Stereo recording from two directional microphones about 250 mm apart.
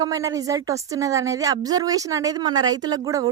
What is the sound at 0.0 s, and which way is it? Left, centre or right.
A woman's voice, centre.